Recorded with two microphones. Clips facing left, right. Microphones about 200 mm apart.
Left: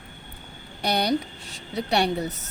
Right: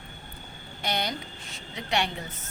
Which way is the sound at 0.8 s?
35° left (ahead or behind).